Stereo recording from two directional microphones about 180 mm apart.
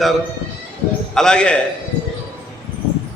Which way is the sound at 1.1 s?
5° left (ahead or behind).